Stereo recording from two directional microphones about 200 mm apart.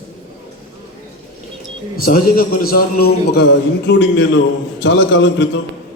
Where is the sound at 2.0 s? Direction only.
45° left (ahead or behind).